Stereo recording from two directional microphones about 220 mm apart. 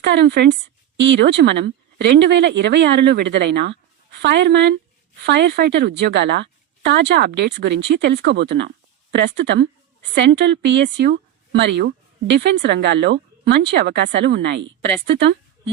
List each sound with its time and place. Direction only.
0.0 s a woman's voice: 50° right (ahead or behind)